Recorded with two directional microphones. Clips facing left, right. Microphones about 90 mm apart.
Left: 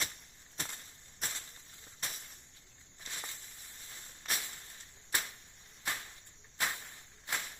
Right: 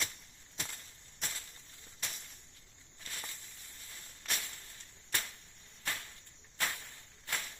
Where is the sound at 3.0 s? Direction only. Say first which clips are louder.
Left 1 dB; 20° left (ahead or behind).